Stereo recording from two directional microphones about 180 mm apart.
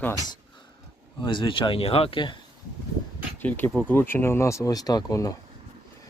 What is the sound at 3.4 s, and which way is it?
Speech, 10° left (ahead or behind).